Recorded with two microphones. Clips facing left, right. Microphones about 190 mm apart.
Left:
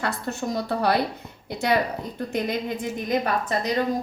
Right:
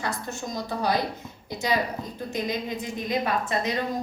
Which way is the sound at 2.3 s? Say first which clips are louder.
Left 3 dB; 50° left (ahead or behind).